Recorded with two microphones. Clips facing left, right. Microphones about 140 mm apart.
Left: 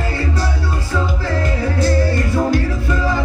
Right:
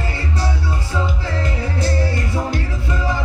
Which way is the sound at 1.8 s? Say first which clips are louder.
Left 5 dB; 25° right (ahead or behind).